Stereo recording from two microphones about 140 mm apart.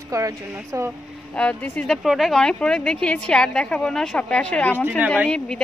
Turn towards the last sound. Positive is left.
turn(degrees=5)  # may be behind; listen again after turning